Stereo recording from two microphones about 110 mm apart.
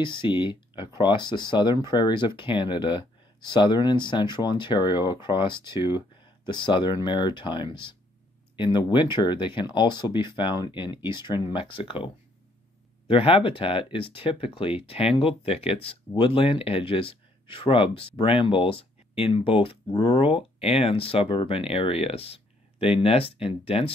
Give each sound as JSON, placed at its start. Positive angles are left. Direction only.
{"t": 0.0, "sound": "speech", "side_deg": 50}